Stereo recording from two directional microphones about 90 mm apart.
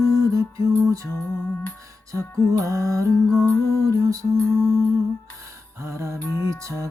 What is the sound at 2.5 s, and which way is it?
Music, 35° right (ahead or behind).